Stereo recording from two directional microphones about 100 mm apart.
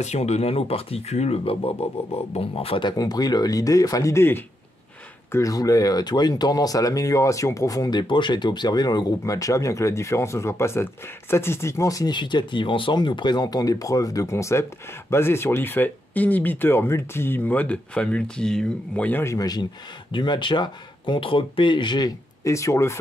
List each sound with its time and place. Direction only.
0.2 s speech: 90° left; by 2.8 s 70° left (ahead or behind)
2.8 s speech: 45° left (ahead or behind)
12.1 s speech: 50° left (ahead or behind); by 19.2 s 15° left (ahead or behind)
19.2 s speech: 40° left (ahead or behind)
20.1 s speech: 50° left (ahead or behind)
22.4 s speech: 30° left (ahead or behind)